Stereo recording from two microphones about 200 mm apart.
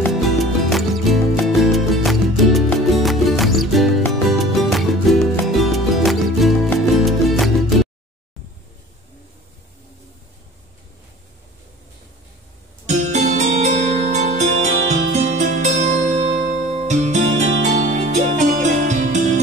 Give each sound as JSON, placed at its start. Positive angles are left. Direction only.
{"t": 0.0, "sound": "music", "side_deg": 0}
{"t": 12.8, "sound": "music", "side_deg": -35}